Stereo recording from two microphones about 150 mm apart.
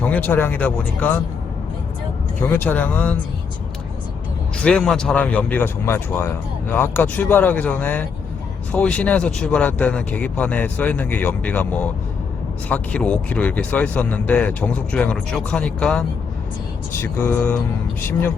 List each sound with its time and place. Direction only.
0.0 s speech: 10° left (ahead or behind)
2.4 s speech: 15° left (ahead or behind)
4.5 s speech: 5° left (ahead or behind)